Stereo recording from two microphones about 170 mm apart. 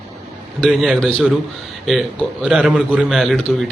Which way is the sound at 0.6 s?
Centre (ahead or behind).